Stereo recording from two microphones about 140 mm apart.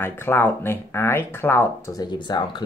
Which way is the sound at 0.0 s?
15° left (ahead or behind).